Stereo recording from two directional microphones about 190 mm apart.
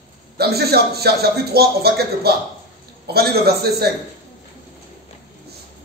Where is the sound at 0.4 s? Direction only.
55° right (ahead or behind).